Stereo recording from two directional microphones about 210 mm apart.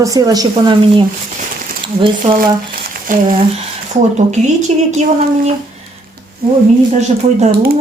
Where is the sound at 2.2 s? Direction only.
35° right (ahead or behind).